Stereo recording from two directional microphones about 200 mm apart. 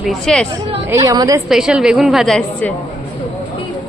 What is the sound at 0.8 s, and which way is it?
Speech, 15° right (ahead or behind).